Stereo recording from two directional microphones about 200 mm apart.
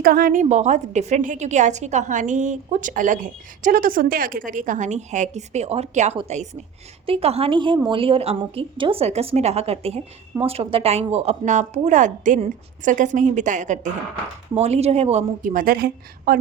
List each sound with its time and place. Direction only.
0.0 s a woman's voice: 45° right (ahead or behind)